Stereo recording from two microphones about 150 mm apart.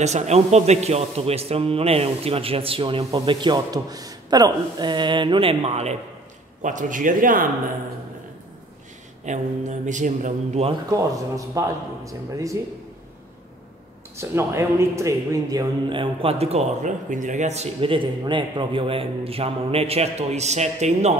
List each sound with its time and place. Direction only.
0.0 s a man's voice: 50° right (ahead or behind)
6.6 s speech: 60° right (ahead or behind)
9.2 s speech: 55° right (ahead or behind)
10.9 s a man's voice: 20° right (ahead or behind)
14.1 s a man's voice: 20° right (ahead or behind)
15.9 s speech: 35° right (ahead or behind)